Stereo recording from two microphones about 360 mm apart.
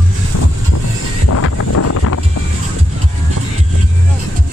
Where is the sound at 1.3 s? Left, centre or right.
Left.